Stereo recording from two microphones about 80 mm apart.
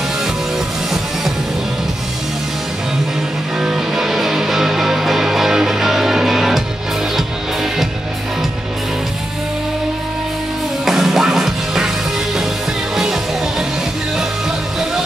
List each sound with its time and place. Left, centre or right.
3.5 s music: centre
10.9 s music: centre
12.9 s music: centre